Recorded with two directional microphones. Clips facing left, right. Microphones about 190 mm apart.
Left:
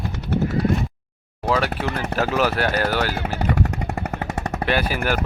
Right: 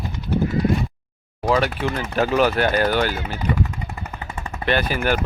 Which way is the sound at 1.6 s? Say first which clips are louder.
Right 1 dB; 65° left (ahead or behind).